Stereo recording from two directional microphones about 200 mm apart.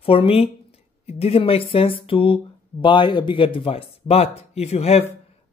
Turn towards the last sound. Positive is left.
turn(degrees=30)  # may be behind; listen again after turning